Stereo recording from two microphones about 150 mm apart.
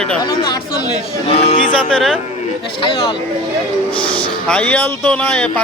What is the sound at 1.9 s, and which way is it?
Speech, centre (ahead or behind).